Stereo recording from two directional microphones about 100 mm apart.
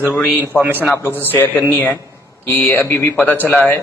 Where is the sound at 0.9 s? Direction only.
25° left (ahead or behind).